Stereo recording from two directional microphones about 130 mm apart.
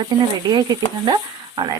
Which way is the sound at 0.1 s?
35° right (ahead or behind).